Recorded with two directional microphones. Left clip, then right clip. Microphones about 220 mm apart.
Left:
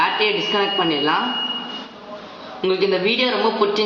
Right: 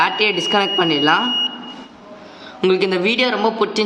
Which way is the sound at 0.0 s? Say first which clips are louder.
Right 2 dB; 55° right (ahead or behind).